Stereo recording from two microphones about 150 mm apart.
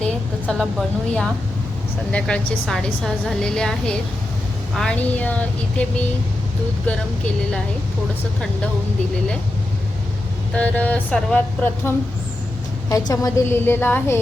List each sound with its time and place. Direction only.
0.0 s a woman's voice: 5° left (ahead or behind)
10.5 s speech: 10° left (ahead or behind)
12.9 s speech: 20° left (ahead or behind)